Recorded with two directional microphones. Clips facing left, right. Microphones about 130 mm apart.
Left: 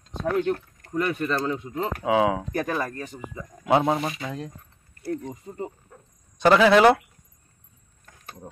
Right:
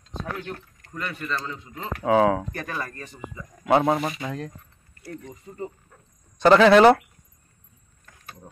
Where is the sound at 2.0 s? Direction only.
10° left (ahead or behind).